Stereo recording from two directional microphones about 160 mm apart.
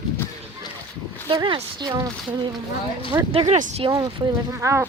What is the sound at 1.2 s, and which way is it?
Speech, 30° right (ahead or behind).